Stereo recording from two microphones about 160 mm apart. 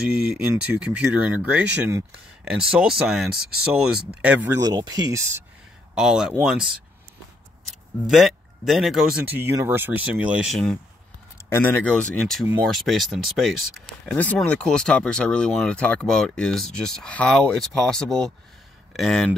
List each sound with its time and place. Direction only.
0.3 s speech: 5° right (ahead or behind)
4.5 s speech: 20° right (ahead or behind)
5.9 s speech: 5° right (ahead or behind)
8.1 s speech: centre (ahead or behind)
9.3 s speech: 15° right (ahead or behind); by 10.8 s centre (ahead or behind)
11.4 s speech: 15° left (ahead or behind)
14.1 s speech: 10° left (ahead or behind)